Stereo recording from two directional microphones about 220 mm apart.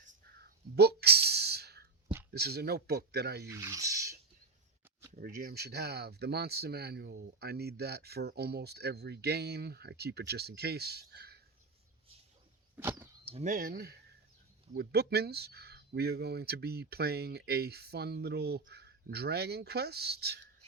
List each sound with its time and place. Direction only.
0.3 s a sound: 45° right (ahead or behind)
2.3 s speech: 45° right (ahead or behind)
3.5 s speech: 15° right (ahead or behind)
5.1 s speech: 40° right (ahead or behind)
12.7 s a sound: 10° right (ahead or behind)
13.2 s speech: 30° right (ahead or behind); by 20.4 s 45° right (ahead or behind)